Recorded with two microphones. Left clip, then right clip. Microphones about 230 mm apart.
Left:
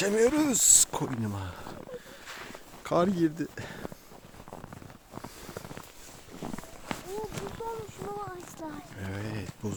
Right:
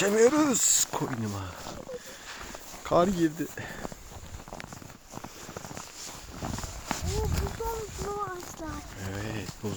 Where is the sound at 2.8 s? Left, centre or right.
Centre.